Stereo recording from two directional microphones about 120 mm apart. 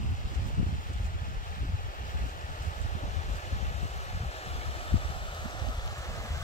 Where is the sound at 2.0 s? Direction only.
90° left.